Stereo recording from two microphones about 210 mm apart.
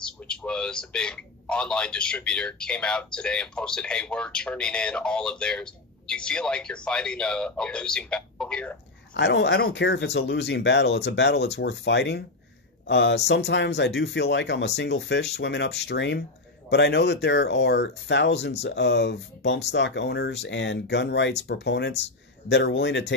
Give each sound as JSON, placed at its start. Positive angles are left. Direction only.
{"t": 0.0, "sound": "speech", "side_deg": 5}
{"t": 9.1, "sound": "speech", "side_deg": 55}